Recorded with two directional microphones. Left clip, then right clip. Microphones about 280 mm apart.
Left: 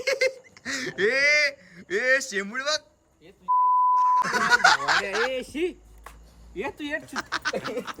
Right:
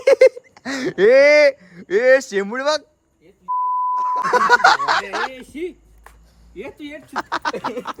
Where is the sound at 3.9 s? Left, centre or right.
Centre.